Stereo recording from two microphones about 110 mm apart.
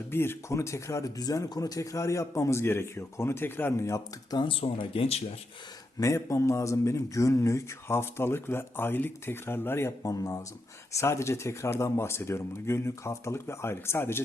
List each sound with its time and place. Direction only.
0.1 s speech: 20° left (ahead or behind)
4.6 s speech: 60° left (ahead or behind)
6.0 s speech: 30° left (ahead or behind)